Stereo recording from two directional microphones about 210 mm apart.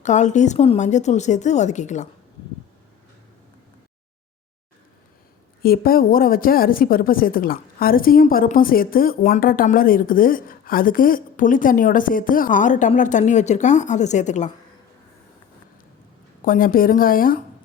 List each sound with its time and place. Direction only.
0.0 s speech: 35° left (ahead or behind)
5.6 s speech: 45° left (ahead or behind)
16.4 s speech: 40° left (ahead or behind)